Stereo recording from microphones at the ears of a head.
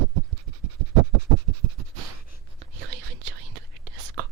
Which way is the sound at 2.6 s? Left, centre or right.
Right.